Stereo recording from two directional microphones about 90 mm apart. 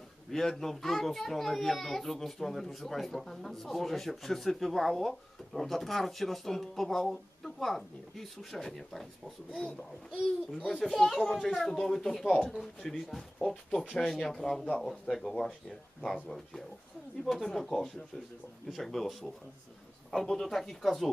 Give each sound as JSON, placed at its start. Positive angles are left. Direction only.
{"t": 0.3, "sound": "a child's voice", "side_deg": 5}